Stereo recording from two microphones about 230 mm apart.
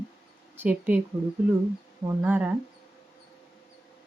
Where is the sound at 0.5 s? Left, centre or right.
Centre.